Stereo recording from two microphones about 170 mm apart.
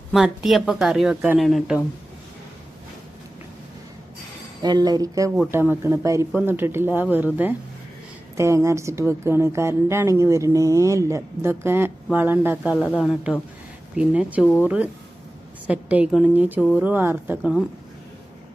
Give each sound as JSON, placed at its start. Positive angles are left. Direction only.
{"t": 0.1, "sound": "speech", "side_deg": 0}
{"t": 4.6, "sound": "a woman's voice", "side_deg": -25}
{"t": 8.4, "sound": "a woman's voice", "side_deg": -15}
{"t": 12.8, "sound": "a woman's voice", "side_deg": 5}